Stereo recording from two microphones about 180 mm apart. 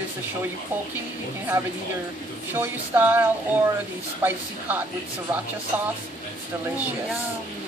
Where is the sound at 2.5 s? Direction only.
10° right (ahead or behind).